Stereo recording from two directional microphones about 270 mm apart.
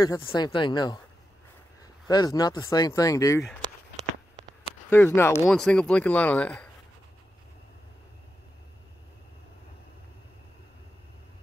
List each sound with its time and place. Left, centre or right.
0.0 s speech: centre
2.0 s speech: centre
4.8 s speech: centre